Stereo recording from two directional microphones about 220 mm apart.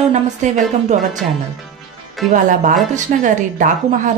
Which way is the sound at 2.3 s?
35° right (ahead or behind).